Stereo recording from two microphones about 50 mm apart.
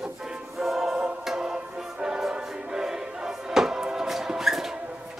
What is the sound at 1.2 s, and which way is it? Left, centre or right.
Music, centre.